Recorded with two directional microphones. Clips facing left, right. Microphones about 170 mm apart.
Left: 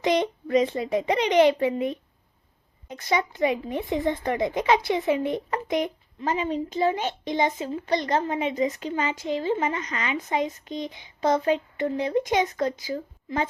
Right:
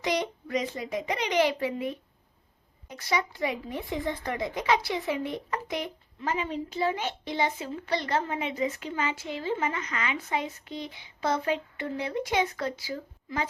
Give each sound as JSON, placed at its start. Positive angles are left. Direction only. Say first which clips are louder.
{"t": 0.0, "sound": "speech", "louder": "left 6 dB", "side_deg": 25}
{"t": 3.1, "sound": "speech", "louder": "left 5 dB", "side_deg": 20}